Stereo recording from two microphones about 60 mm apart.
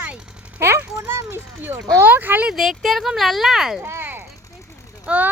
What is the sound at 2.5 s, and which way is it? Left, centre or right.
Speech, centre.